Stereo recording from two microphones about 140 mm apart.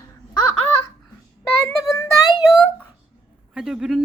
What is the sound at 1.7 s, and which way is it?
Child singing, 20° left (ahead or behind).